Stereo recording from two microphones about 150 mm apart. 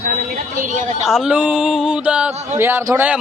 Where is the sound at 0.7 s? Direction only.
55° right (ahead or behind).